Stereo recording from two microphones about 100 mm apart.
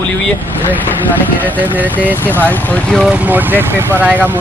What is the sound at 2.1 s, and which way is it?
Speech, 20° left (ahead or behind).